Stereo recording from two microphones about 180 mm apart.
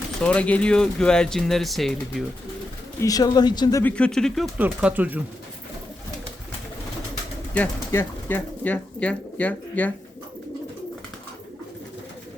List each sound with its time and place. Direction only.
0.2 s speech: 5° left (ahead or behind)
3.0 s speech: 20° left (ahead or behind)
3.9 s speech: 5° left (ahead or behind)
4.5 s speech: 5° right (ahead or behind)
7.5 s speech: 10° left (ahead or behind)